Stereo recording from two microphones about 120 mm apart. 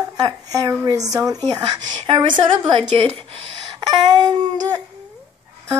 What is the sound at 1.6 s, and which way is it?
A woman's voice, 45° right (ahead or behind).